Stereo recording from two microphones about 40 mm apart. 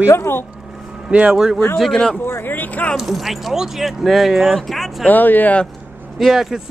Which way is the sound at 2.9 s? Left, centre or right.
Centre.